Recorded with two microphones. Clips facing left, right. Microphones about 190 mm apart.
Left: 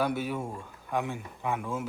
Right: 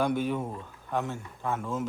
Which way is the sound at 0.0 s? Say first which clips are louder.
Right 2 dB; 10° left (ahead or behind).